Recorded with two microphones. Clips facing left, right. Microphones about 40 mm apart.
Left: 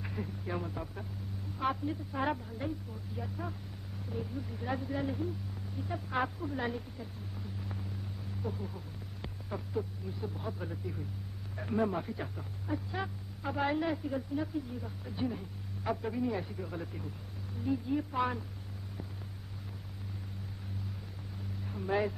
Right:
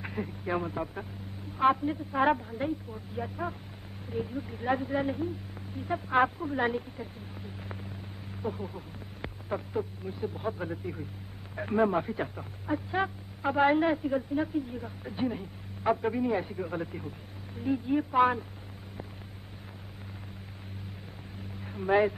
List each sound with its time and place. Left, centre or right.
0.0 s speech: right
21.6 s speech: right